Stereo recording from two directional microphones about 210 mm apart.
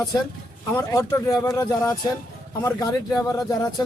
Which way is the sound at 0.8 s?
15° left (ahead or behind).